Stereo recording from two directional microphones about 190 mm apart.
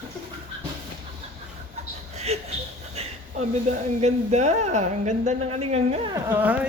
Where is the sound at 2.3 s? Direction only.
35° right (ahead or behind).